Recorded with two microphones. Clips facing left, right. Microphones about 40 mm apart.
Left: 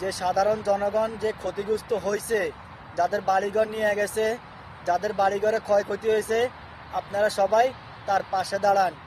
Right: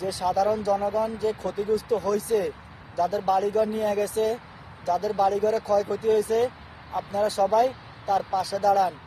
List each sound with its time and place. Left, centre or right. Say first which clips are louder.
0.0 s speech: even; left
1.7 s speech: right 2 dB; left
4.9 s speech: even; left
5.9 s speech: right 1 dB; left
6.9 s speech: left 1 dB; left